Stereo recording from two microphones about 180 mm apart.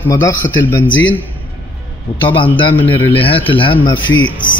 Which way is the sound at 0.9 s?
90° left.